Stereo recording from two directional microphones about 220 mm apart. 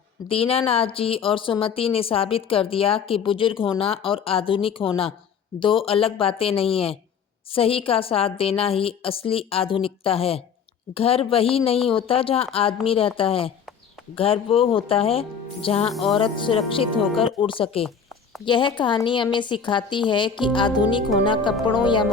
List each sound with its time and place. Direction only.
0.3 s a woman's voice: 25° left (ahead or behind)
15.9 s music: centre (ahead or behind)
16.1 s a woman's voice: 25° left (ahead or behind)